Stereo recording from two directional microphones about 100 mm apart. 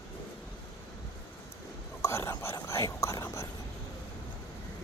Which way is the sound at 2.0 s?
30° left (ahead or behind).